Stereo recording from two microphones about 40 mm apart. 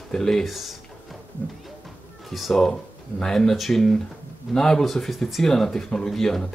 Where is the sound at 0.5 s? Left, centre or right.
Centre.